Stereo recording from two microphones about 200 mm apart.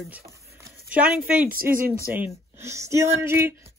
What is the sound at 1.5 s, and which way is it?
Speech, 45° right (ahead or behind).